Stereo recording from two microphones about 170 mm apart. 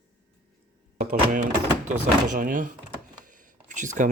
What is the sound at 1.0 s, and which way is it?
Speech, 55° right (ahead or behind).